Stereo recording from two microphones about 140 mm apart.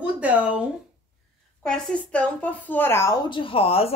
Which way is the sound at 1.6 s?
5° left (ahead or behind).